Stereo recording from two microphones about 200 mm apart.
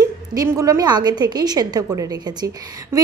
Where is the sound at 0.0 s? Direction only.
20° right (ahead or behind).